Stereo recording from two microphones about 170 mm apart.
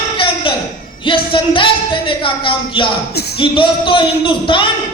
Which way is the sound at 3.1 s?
70° left (ahead or behind).